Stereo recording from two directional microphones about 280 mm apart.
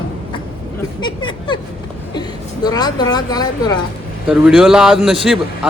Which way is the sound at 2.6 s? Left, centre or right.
Centre.